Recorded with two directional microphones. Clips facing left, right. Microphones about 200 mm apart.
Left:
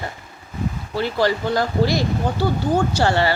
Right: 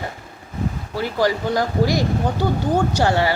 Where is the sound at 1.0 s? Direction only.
15° right (ahead or behind).